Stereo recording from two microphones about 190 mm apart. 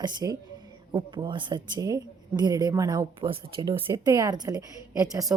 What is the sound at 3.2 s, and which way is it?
A woman's voice, 30° right (ahead or behind).